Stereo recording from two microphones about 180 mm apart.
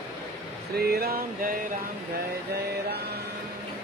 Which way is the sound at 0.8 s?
60° right (ahead or behind).